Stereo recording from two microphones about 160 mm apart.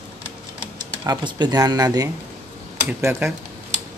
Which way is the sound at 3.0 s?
10° right (ahead or behind).